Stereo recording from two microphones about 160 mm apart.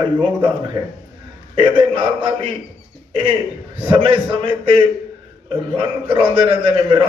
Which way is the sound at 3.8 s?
35° right (ahead or behind).